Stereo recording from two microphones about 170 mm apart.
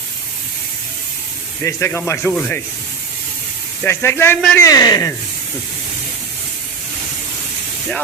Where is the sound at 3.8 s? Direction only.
15° left (ahead or behind).